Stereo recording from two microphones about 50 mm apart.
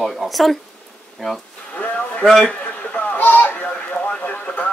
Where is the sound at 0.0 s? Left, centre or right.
Centre.